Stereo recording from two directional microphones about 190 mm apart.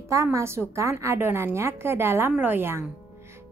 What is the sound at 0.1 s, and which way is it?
A woman's voice, 15° right (ahead or behind).